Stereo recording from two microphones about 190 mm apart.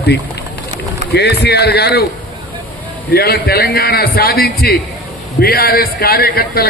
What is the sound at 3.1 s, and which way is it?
A man's voice, 55° left (ahead or behind).